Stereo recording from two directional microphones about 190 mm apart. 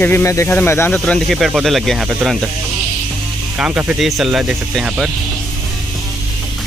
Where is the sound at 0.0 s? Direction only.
15° left (ahead or behind).